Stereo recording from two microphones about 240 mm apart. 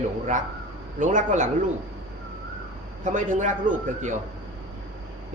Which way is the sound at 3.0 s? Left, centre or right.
Right.